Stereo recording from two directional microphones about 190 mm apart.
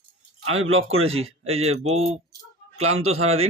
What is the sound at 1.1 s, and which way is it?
Speech, 30° right (ahead or behind).